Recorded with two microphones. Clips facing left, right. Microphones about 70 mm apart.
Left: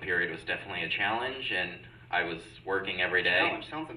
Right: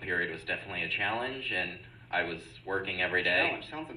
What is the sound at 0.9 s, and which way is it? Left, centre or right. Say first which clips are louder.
Speech: left 2 dB; left.